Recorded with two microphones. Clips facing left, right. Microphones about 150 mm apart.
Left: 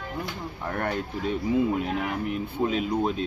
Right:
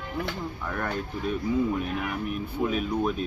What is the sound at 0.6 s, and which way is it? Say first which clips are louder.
Speech: left 4 dB; 30° left (ahead or behind).